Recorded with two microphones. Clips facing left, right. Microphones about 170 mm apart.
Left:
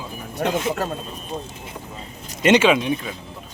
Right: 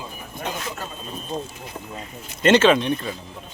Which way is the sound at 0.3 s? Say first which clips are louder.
Left 9 dB; 75° left (ahead or behind).